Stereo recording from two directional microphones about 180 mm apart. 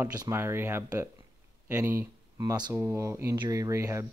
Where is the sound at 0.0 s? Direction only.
15° right (ahead or behind).